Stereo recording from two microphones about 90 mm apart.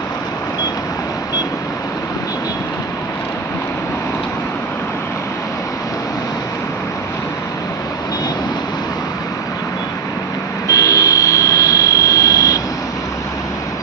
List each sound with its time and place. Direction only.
10.7 s jet engine: 35° left (ahead or behind)